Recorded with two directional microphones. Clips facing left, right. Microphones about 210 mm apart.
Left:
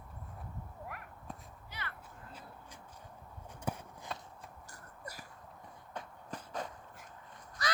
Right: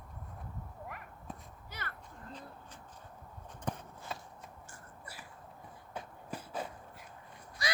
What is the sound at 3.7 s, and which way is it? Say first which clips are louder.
Walk: even; 10° left (ahead or behind).